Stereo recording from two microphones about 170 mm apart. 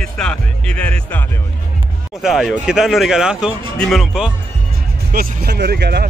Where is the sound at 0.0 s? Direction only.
5° left (ahead or behind).